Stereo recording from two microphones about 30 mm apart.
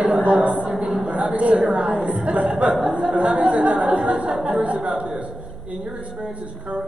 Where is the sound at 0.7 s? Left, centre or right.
Right.